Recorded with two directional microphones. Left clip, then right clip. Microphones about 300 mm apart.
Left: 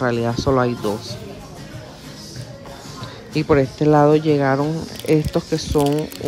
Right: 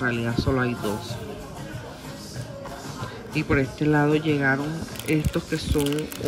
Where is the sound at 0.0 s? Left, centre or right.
Centre.